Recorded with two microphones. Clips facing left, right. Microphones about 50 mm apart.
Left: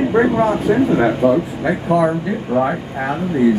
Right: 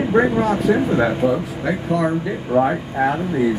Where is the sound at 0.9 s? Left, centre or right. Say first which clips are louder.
Left 4 dB; centre.